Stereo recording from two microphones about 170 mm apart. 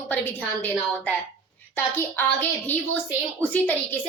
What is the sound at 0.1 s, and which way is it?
A woman's voice, 10° left (ahead or behind).